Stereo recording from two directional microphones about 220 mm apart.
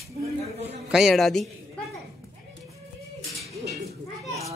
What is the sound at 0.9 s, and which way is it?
Speech, centre (ahead or behind).